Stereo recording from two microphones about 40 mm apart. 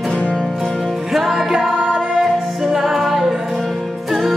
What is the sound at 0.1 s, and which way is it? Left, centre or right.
Music, centre.